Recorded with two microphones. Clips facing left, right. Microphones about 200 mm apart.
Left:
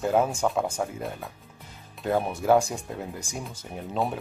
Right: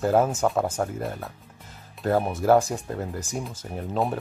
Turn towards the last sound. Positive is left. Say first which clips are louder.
# right 2 dB
turn(degrees=0)  # may be behind; listen again after turning